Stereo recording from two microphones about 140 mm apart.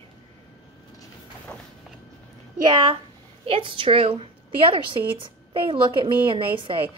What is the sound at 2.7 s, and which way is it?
A woman's voice, 35° right (ahead or behind).